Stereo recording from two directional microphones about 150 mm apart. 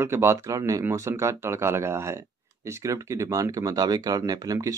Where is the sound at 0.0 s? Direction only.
15° right (ahead or behind).